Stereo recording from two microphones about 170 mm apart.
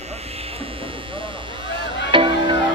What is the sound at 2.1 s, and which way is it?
Music, 30° right (ahead or behind).